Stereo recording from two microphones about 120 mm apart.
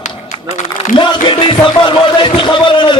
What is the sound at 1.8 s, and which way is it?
A man's voice, 40° left (ahead or behind).